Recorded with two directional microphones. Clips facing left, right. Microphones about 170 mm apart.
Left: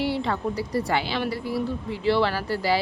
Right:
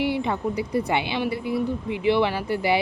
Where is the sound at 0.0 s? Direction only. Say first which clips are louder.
Right 1 dB; 15° right (ahead or behind).